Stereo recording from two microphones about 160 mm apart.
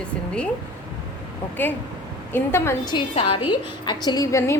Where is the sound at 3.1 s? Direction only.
40° left (ahead or behind).